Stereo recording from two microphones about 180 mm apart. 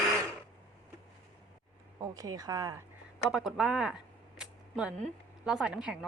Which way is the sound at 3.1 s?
Centre (ahead or behind).